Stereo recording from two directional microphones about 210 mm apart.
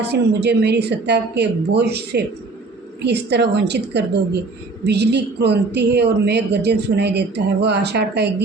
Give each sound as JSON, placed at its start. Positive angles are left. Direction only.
{"t": 0.0, "sound": "speech", "side_deg": -50}